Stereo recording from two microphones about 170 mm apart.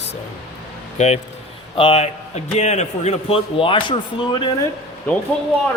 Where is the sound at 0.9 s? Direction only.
40° left (ahead or behind).